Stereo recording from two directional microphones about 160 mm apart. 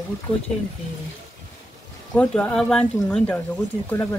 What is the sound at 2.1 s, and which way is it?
Speech, 5° left (ahead or behind).